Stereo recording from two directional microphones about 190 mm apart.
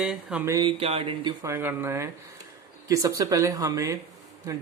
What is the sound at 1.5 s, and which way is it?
Speech, 10° right (ahead or behind).